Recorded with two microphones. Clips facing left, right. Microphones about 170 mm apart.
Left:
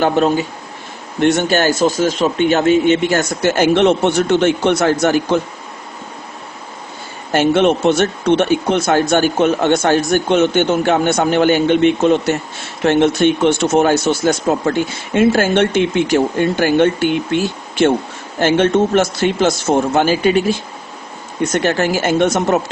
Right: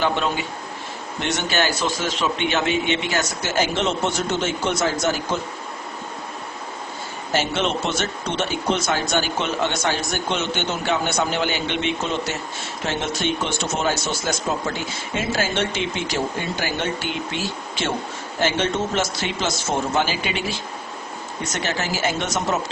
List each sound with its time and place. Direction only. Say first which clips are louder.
0.0 s speech: left 8 dB; 45° left (ahead or behind); by 5.4 s 65° left (ahead or behind)
7.3 s speech: left 10 dB; 55° left (ahead or behind)